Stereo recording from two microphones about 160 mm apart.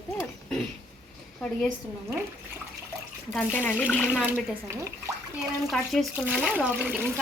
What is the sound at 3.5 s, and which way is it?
Speech, 15° left (ahead or behind).